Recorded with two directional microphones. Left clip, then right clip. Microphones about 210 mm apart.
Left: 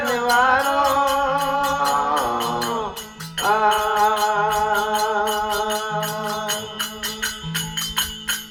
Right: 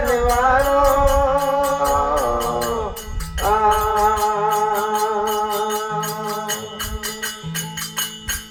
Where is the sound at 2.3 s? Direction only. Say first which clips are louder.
Right 2 dB; 35° left (ahead or behind).